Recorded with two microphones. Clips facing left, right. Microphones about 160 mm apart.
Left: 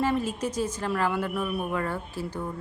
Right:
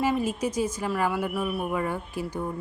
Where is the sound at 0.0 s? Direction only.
10° right (ahead or behind).